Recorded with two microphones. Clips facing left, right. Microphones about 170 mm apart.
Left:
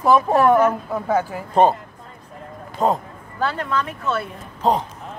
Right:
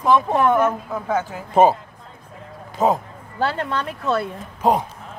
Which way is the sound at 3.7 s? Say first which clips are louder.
Right 1 dB; 35° right (ahead or behind).